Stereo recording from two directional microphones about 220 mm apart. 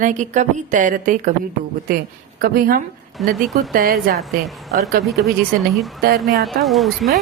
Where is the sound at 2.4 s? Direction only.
40° right (ahead or behind).